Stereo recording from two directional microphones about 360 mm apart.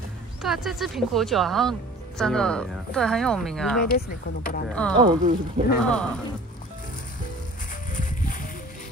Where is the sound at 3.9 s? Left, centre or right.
Left.